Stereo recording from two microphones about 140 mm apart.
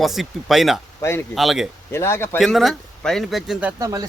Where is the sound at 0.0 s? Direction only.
Centre (ahead or behind).